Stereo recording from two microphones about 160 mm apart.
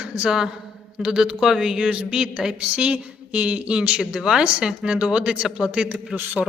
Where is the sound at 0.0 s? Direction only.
10° right (ahead or behind).